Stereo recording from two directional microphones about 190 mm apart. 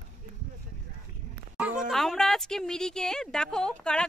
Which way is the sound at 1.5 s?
Centre (ahead or behind).